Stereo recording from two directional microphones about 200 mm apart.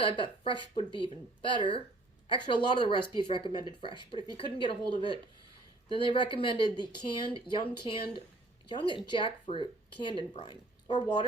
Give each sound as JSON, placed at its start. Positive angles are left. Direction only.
{"t": 0.0, "sound": "speech", "side_deg": 25}
{"t": 0.9, "sound": "speech", "side_deg": -20}
{"t": 1.5, "sound": "speech", "side_deg": 25}